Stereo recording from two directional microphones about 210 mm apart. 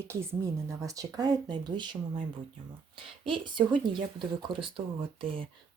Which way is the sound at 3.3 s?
25° right (ahead or behind).